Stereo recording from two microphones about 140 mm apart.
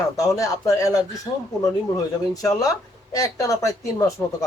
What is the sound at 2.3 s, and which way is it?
Speech, 25° left (ahead or behind).